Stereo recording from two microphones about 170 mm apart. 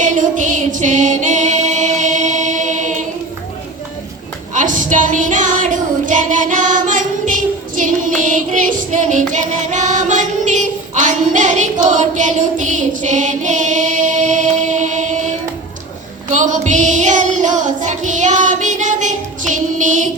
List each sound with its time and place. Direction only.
0.0 s music: 50° right (ahead or behind)
4.5 s a sound: 50° right (ahead or behind)
7.8 s child singing: 50° right (ahead or behind)
16.3 s child singing: 45° right (ahead or behind)